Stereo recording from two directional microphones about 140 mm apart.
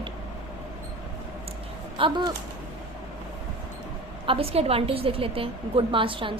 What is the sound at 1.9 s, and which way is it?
Speech, 35° right (ahead or behind).